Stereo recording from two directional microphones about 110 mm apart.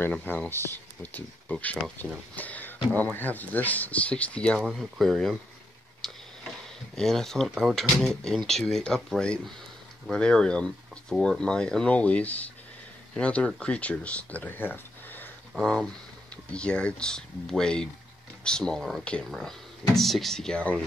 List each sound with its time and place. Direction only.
0.0 s speech: 15° left (ahead or behind)
4.6 s speech: centre (ahead or behind)
6.0 s tick-tock: centre (ahead or behind)
7.0 s speech: 5° left (ahead or behind)
15.5 s speech: 5° left (ahead or behind)